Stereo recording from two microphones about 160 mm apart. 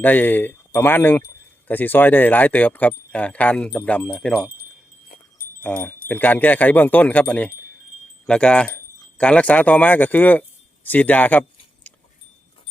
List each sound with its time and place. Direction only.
0.0 s speech: 10° left (ahead or behind)
5.1 s a sound: 60° left (ahead or behind)
5.6 s speech: 10° left (ahead or behind)